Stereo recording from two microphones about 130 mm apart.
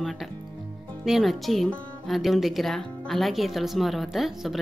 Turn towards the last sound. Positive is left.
turn(degrees=0)  # may be behind; listen again after turning